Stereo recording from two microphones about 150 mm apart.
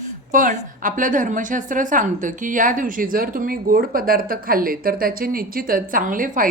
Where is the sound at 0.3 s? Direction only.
60° right (ahead or behind).